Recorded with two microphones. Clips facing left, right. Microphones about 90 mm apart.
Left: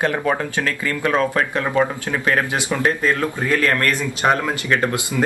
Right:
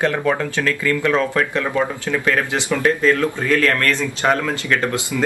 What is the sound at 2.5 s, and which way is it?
Speech, 20° left (ahead or behind).